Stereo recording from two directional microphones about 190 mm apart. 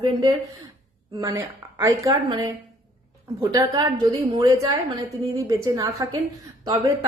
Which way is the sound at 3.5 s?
20° right (ahead or behind).